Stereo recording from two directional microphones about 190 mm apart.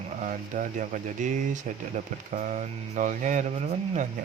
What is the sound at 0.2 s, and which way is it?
Speech, 45° right (ahead or behind).